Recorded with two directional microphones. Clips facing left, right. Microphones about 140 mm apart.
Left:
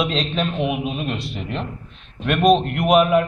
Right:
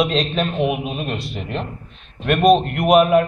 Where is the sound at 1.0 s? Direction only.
45° right (ahead or behind).